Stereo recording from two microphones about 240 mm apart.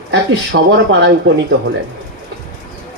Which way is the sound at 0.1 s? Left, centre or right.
Right.